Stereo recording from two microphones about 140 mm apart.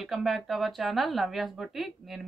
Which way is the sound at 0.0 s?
Centre (ahead or behind).